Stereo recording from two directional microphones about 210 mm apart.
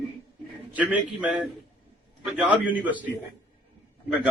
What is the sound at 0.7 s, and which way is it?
A man's voice, 5° right (ahead or behind).